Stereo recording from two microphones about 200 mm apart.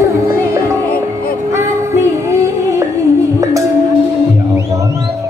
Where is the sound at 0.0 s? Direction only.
15° right (ahead or behind).